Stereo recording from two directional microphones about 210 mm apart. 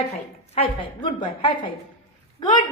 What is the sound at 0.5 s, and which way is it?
A woman's voice, 25° left (ahead or behind).